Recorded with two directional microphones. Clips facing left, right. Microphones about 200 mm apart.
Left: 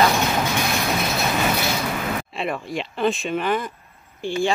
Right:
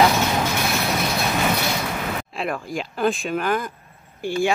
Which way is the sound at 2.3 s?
Centre (ahead or behind).